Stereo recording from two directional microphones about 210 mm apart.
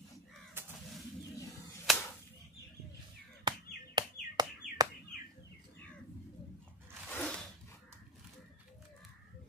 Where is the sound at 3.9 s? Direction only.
20° right (ahead or behind).